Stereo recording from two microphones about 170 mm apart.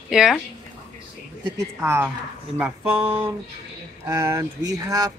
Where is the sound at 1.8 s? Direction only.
15° right (ahead or behind).